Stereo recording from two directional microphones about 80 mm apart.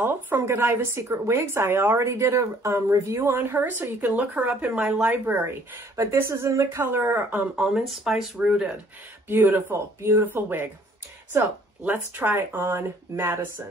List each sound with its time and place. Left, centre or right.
0.0 s a woman's voice: right
5.1 s a woman's voice: right
7.5 s speech: centre
9.3 s speech: right
11.8 s speech: right